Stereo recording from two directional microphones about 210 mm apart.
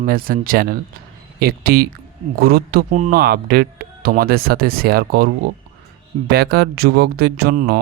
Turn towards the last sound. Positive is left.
turn(degrees=-50)  # may be behind; listen again after turning